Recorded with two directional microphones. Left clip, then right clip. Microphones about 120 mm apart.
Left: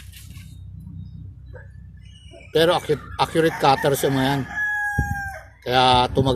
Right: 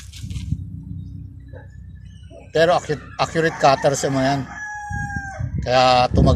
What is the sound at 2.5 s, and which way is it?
Speech, 55° left (ahead or behind).